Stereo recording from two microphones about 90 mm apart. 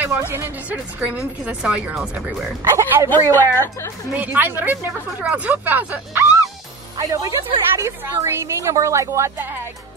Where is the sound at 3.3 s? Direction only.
25° left (ahead or behind).